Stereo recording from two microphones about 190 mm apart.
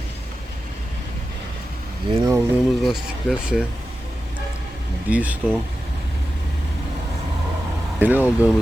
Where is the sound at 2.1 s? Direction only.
20° right (ahead or behind).